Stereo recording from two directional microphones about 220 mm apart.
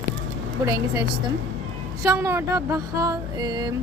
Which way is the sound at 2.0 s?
15° right (ahead or behind).